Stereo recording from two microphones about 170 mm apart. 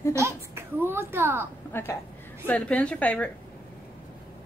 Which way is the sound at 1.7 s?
15° left (ahead or behind).